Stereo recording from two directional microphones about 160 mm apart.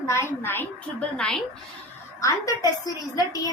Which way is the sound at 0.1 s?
15° left (ahead or behind).